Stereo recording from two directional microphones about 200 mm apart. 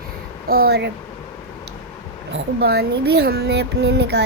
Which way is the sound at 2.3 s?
55° right (ahead or behind).